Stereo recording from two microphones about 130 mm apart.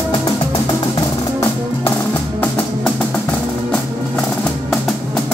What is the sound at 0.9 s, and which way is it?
Music, 30° left (ahead or behind).